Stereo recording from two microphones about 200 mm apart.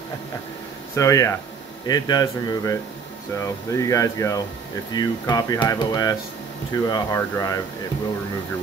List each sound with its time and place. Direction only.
0.9 s speech: 15° left (ahead or behind)